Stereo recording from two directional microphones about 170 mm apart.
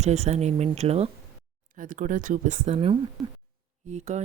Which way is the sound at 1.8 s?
50° right (ahead or behind).